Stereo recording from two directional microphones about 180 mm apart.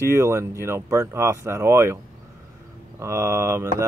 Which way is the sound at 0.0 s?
15° right (ahead or behind).